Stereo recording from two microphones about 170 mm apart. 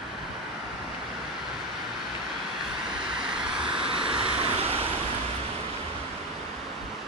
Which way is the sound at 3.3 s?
5° right (ahead or behind).